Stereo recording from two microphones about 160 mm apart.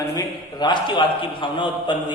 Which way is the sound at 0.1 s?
25° left (ahead or behind).